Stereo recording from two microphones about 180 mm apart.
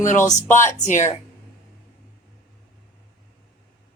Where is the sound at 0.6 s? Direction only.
15° left (ahead or behind).